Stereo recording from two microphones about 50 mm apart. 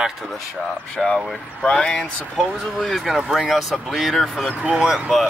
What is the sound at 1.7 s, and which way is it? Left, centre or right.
Speech, centre.